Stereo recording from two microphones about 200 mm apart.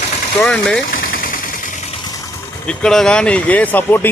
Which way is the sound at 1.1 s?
45° left (ahead or behind).